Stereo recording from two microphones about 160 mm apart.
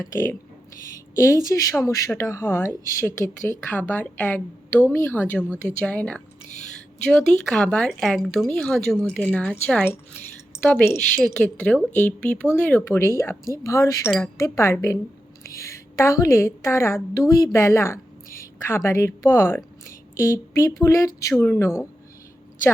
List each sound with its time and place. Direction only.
0.0 s a woman's voice: 20° left (ahead or behind)